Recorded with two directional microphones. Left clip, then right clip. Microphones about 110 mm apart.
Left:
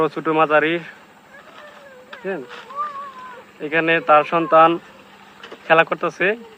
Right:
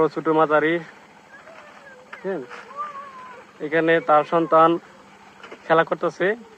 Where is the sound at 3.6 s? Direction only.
25° right (ahead or behind).